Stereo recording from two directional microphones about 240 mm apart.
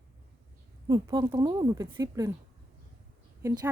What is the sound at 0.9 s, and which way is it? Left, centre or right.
Speech, centre.